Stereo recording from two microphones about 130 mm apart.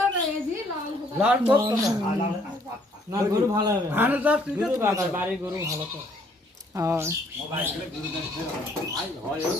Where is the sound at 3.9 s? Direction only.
15° right (ahead or behind).